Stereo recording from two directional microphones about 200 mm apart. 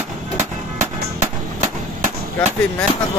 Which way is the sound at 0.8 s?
35° right (ahead or behind).